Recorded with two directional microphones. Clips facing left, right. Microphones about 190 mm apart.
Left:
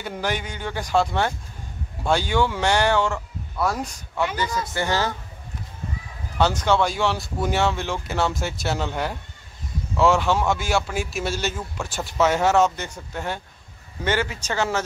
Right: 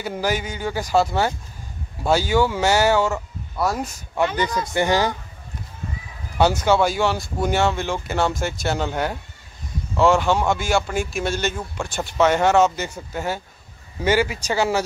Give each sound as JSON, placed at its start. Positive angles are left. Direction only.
{"t": 0.0, "sound": "speech", "side_deg": -5}
{"t": 4.7, "sound": "a man's voice", "side_deg": -15}
{"t": 6.3, "sound": "a man's voice", "side_deg": -10}